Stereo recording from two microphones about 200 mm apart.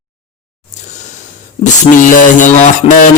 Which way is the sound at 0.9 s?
35° left (ahead or behind).